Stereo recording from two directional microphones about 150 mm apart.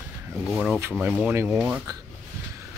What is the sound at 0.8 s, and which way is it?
Speech, 15° right (ahead or behind).